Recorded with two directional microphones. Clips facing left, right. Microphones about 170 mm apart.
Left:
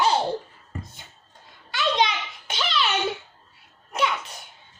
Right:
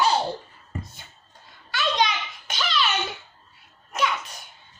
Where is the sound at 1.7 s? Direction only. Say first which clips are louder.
Left 1 dB; 25° left (ahead or behind).